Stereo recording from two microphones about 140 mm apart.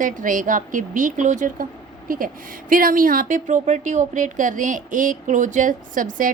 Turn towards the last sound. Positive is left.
turn(degrees=-70)  # may be behind; listen again after turning